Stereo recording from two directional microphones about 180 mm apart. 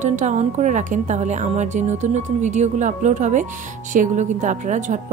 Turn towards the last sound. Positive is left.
turn(degrees=-40)  # may be behind; listen again after turning